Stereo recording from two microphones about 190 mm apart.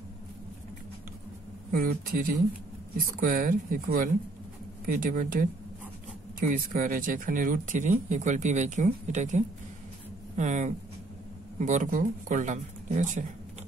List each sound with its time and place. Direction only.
1.7 s speech: 50° right (ahead or behind)